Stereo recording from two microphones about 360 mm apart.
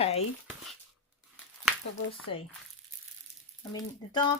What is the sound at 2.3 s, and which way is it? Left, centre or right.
Speech, left.